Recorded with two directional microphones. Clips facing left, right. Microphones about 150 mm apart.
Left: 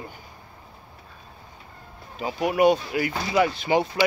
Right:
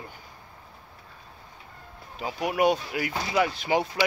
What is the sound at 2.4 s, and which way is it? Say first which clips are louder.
Speech: left 4 dB; centre (ahead or behind).